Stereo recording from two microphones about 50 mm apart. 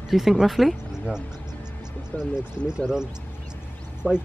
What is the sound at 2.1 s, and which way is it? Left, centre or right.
Speech, left.